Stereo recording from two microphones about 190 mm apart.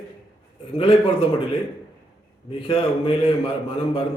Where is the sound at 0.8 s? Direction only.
30° left (ahead or behind).